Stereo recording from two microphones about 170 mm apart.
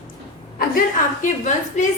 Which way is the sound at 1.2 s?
45° left (ahead or behind).